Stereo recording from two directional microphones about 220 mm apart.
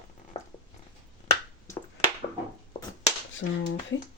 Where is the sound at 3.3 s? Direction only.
55° left (ahead or behind).